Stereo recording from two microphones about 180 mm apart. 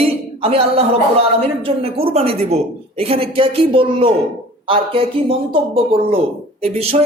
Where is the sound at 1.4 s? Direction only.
35° right (ahead or behind).